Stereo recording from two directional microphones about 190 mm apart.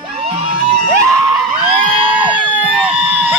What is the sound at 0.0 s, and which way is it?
Music, 30° right (ahead or behind).